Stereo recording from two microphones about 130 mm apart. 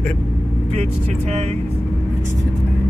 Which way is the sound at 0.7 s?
55° right (ahead or behind).